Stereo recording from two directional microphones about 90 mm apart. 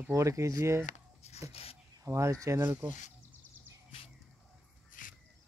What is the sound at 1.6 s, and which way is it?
Speech, 90° left.